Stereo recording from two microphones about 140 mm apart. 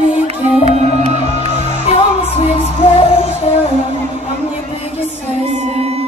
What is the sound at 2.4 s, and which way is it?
Music, 45° left (ahead or behind).